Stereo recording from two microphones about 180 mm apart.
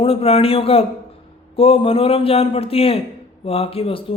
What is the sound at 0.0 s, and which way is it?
Speech, 30° left (ahead or behind).